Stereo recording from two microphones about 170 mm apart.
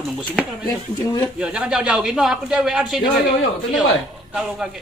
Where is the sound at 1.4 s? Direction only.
5° right (ahead or behind).